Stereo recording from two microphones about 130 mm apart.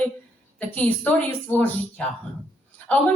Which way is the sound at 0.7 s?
10° left (ahead or behind).